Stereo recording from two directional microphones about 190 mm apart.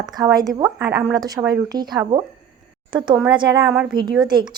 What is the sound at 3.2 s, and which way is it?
Speech, 20° right (ahead or behind).